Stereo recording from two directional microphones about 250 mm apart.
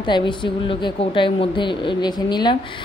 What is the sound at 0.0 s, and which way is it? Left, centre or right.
A woman's voice, centre.